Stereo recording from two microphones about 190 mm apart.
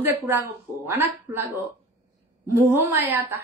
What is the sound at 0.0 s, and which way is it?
A woman's voice, 10° right (ahead or behind).